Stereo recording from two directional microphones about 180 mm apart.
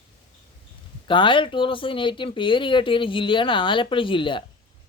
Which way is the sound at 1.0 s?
25° left (ahead or behind).